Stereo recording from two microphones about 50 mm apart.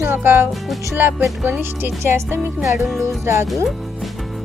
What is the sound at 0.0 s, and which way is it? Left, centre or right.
Speech, right.